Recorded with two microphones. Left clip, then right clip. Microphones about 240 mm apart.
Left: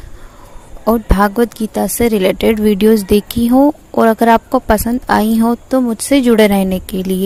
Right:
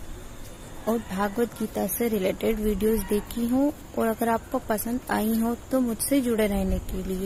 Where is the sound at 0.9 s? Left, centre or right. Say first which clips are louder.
Left 14 dB; left.